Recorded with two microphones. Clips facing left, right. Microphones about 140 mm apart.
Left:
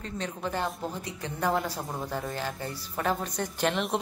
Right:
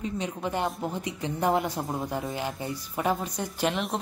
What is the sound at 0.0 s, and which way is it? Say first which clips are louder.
A woman's voice: right 3 dB; 15° right (ahead or behind).